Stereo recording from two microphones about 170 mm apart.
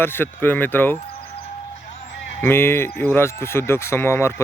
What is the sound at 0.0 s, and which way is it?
Speech, 15° left (ahead or behind).